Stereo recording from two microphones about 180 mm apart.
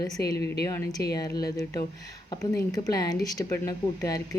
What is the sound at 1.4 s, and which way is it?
Speech, 20° left (ahead or behind).